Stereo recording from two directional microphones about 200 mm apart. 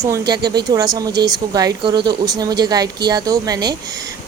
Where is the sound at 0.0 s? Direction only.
15° right (ahead or behind).